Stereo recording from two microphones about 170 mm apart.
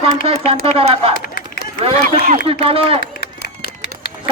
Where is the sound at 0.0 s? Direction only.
35° right (ahead or behind).